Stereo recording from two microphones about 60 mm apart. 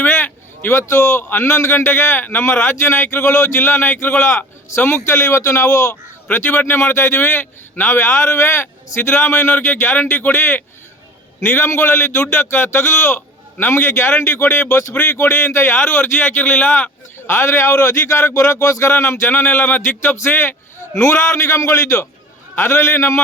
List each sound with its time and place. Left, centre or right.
0.0 s a sound: left
0.7 s a man's voice: left
1.3 s a man's voice: left
3.2 s a man's voice: left
5.1 s a man's voice: left
6.3 s a man's voice: left
17.2 s a man's voice: left
21.0 s a man's voice: left